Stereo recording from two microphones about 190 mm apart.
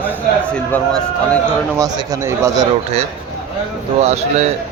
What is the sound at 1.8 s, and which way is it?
Speech, 20° right (ahead or behind).